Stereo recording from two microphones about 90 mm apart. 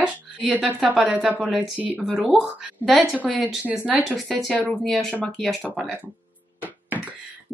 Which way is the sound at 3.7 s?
15° right (ahead or behind).